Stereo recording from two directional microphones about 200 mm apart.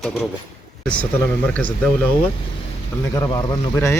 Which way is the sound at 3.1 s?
20° left (ahead or behind).